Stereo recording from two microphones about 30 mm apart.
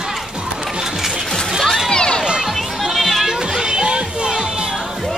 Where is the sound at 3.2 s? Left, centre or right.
Right.